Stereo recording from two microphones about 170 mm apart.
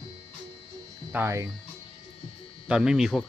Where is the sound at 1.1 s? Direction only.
15° right (ahead or behind).